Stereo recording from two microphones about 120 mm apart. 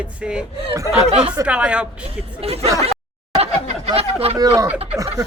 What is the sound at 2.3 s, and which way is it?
Speech, 55° right (ahead or behind).